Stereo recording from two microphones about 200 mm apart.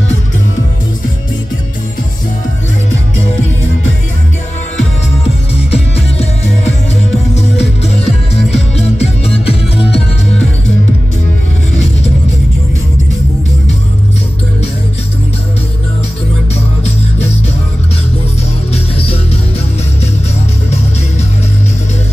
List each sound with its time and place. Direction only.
5.7 s music: 30° left (ahead or behind)
8.0 s music: 35° left (ahead or behind)